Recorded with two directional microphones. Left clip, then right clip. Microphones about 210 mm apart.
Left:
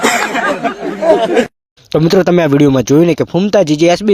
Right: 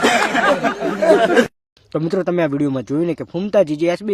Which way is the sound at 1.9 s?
40° left (ahead or behind).